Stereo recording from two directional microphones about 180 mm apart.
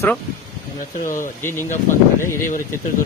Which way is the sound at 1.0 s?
50° left (ahead or behind).